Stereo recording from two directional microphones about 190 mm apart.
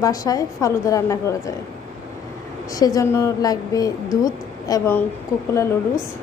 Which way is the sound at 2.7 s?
20° left (ahead or behind).